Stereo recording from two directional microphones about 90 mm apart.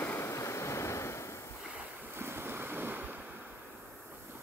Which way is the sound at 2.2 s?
25° right (ahead or behind).